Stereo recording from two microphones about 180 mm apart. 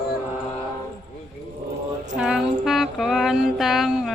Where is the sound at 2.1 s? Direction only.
5° right (ahead or behind).